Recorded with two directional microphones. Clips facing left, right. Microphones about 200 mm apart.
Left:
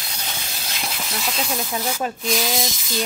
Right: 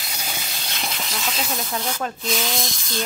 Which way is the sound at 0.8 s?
Centre (ahead or behind).